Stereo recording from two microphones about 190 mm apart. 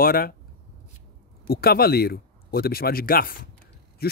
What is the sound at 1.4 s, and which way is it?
Speech, 55° left (ahead or behind).